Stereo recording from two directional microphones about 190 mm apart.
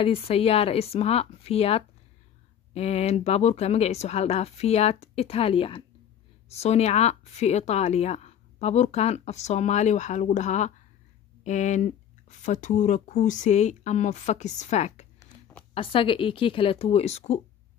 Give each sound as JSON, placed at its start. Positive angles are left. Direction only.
{"t": 0.0, "sound": "speech", "side_deg": 30}
{"t": 15.1, "sound": "a sound", "side_deg": 10}
{"t": 15.7, "sound": "speech", "side_deg": 30}